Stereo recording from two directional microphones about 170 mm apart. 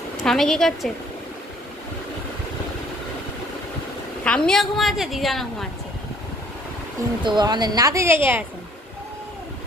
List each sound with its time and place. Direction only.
0.2 s a woman's voice: centre (ahead or behind)
4.2 s a woman's voice: 5° left (ahead or behind)
7.2 s a woman's voice: 25° right (ahead or behind)